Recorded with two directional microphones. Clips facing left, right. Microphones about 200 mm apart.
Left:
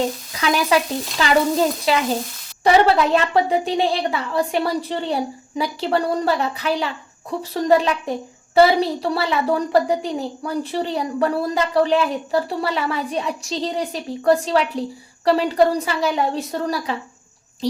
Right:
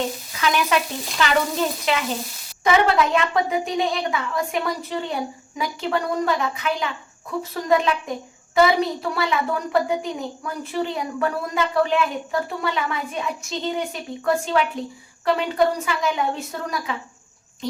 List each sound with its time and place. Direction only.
0.3 s a woman's voice: 35° left (ahead or behind)